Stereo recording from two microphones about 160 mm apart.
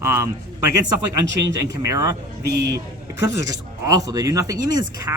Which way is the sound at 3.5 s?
20° right (ahead or behind).